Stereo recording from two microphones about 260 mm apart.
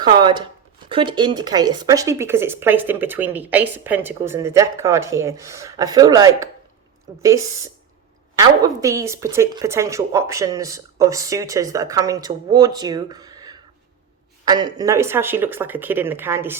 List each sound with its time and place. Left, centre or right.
0.0 s a woman's voice: centre